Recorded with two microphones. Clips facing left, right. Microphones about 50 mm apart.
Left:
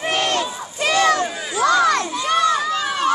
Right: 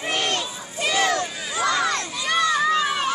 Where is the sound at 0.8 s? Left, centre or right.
Left.